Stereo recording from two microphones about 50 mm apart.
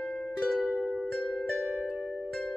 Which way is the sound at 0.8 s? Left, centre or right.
Centre.